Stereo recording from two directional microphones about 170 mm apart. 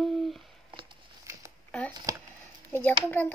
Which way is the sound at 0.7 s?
30° right (ahead or behind).